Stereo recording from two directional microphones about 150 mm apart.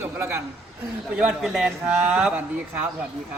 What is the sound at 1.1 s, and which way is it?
A man's voice, 5° right (ahead or behind).